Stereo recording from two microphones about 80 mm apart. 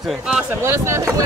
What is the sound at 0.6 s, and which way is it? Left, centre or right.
Speech, right.